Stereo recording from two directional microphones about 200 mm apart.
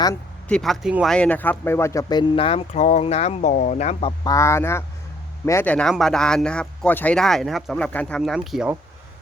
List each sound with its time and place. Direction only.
0.4 s speech: 5° left (ahead or behind); by 4.1 s 35° left (ahead or behind)
4.2 s speech: 15° left (ahead or behind); by 8.7 s centre (ahead or behind)